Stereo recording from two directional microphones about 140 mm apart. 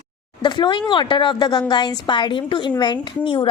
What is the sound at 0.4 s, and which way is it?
A woman's voice, 35° left (ahead or behind).